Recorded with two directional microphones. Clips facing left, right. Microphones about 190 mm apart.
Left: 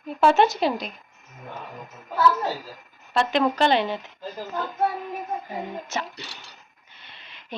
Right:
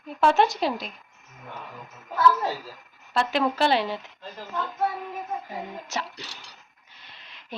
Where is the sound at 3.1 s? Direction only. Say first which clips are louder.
Left 3 dB; 5° right (ahead or behind).